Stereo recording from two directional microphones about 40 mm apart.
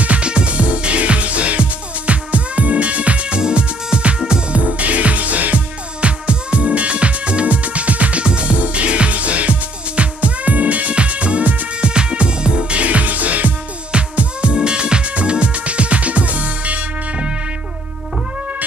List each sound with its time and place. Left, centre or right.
0.0 s music: right
5.9 s music: right
13.9 s music: right